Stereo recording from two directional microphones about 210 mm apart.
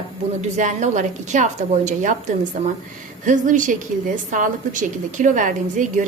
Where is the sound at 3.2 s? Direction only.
35° right (ahead or behind).